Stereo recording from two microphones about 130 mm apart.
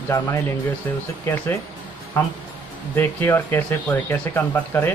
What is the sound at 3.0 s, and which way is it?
Speech, 15° left (ahead or behind).